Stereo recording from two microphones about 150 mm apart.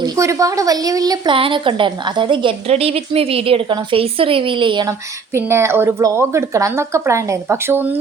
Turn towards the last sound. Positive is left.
turn(degrees=-15)  # may be behind; listen again after turning